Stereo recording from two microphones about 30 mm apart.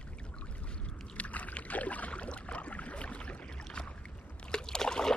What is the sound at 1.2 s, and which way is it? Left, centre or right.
Rowboat, left.